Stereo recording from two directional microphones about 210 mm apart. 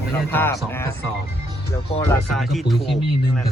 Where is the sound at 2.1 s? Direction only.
Centre (ahead or behind).